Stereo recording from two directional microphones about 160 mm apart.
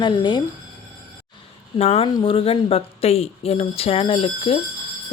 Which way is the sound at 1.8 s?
40° left (ahead or behind).